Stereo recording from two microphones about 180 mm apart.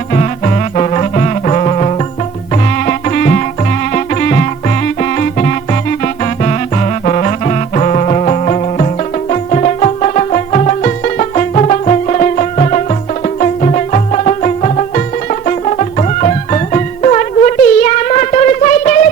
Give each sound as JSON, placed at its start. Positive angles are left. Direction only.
{"t": 0.1, "sound": "music", "side_deg": 40}
{"t": 2.7, "sound": "music", "side_deg": 45}